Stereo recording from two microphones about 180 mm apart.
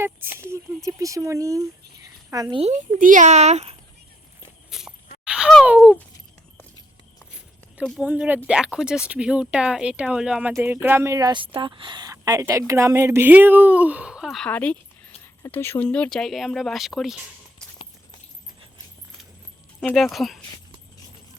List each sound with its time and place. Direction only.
0.5 s speech: 15° right (ahead or behind)
2.6 s speech: 40° right (ahead or behind)
4.7 s a sound: 5° right (ahead or behind)
5.6 s speech: 5° right (ahead or behind)
8.0 s speech: 10° right (ahead or behind)
19.8 s speech: 5° left (ahead or behind)